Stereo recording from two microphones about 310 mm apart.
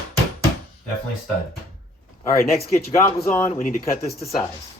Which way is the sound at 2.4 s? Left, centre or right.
Left.